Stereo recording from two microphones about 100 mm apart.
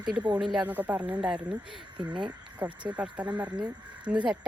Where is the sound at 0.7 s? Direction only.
15° right (ahead or behind).